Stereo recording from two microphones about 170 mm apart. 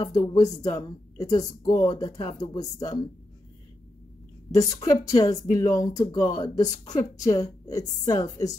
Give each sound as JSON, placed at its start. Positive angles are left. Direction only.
{"t": 0.0, "sound": "speech", "side_deg": 25}
{"t": 4.6, "sound": "speech", "side_deg": 20}